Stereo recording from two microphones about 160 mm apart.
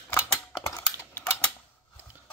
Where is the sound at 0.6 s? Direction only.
15° left (ahead or behind).